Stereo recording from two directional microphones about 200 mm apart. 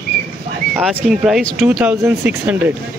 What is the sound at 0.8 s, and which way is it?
Speech, centre (ahead or behind).